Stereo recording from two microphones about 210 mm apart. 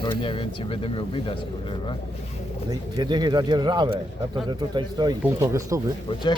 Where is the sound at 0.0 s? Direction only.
25° left (ahead or behind).